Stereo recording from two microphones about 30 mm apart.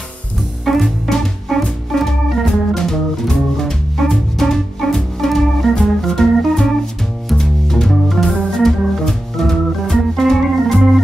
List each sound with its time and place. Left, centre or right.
0.7 s music: centre
1.9 s organ: centre
3.9 s music: centre
7.9 s organ: centre